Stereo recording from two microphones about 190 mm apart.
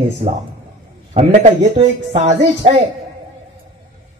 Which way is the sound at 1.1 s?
30° right (ahead or behind).